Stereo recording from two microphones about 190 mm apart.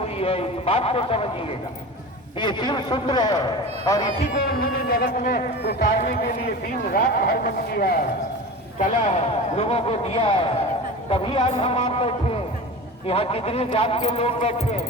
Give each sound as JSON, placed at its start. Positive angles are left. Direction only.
{"t": 0.2, "sound": "a man's voice", "side_deg": 30}
{"t": 4.2, "sound": "speech", "side_deg": 45}
{"t": 8.8, "sound": "a man's voice", "side_deg": 35}